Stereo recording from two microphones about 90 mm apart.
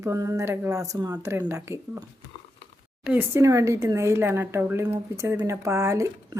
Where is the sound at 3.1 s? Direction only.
30° right (ahead or behind).